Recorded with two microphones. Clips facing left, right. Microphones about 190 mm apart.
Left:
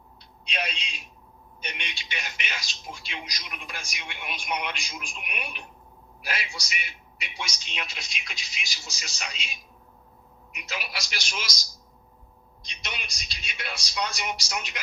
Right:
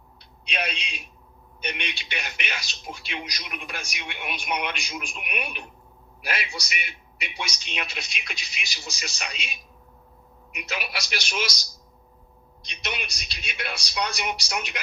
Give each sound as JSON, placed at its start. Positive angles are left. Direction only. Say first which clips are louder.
{"t": 0.4, "sound": "speech", "louder": "right 2 dB", "side_deg": -65}
{"t": 12.6, "sound": "speech", "louder": "right 6 dB", "side_deg": -60}